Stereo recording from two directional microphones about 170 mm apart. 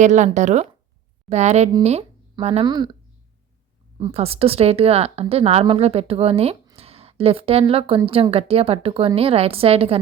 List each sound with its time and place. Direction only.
0.0 s speech: 45° right (ahead or behind); by 2.9 s 25° right (ahead or behind)
3.9 s speech: 35° right (ahead or behind)
6.7 s a sound: 35° right (ahead or behind)
7.7 s speech: 35° right (ahead or behind)